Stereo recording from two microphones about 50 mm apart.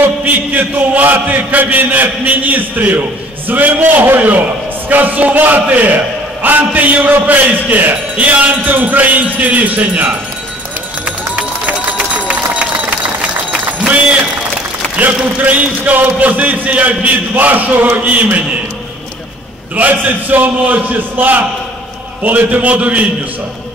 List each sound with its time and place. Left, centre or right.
0.2 s a man's voice: right
11.1 s run: right
15.0 s a man's voice: right
19.7 s a man's voice: right